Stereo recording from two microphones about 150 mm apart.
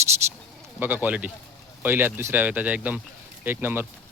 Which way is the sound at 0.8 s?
10° right (ahead or behind).